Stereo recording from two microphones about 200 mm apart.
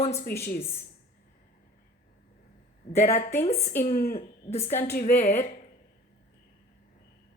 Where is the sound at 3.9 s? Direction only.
45° left (ahead or behind).